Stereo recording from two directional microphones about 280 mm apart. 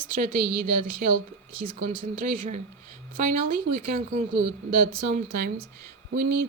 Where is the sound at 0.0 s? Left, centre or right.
Right.